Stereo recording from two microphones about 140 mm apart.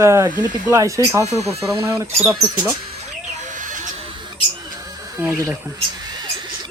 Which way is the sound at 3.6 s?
65° right (ahead or behind).